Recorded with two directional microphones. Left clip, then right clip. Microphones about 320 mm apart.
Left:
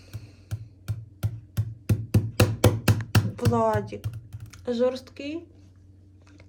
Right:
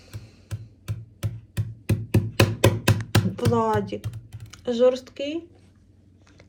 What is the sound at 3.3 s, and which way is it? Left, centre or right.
Speech, centre.